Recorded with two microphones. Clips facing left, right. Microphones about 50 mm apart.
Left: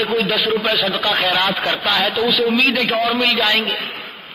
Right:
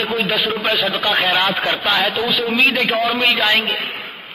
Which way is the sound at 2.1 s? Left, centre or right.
Right.